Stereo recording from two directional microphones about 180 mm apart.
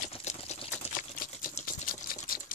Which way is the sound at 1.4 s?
50° left (ahead or behind).